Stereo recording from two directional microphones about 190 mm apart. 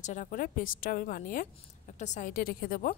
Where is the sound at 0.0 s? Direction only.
40° left (ahead or behind).